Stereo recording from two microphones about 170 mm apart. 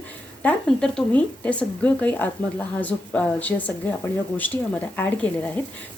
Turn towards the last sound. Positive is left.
turn(degrees=10)  # may be behind; listen again after turning